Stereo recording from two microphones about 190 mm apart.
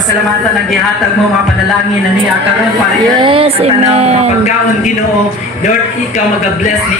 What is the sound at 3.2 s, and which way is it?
Speech, 30° right (ahead or behind).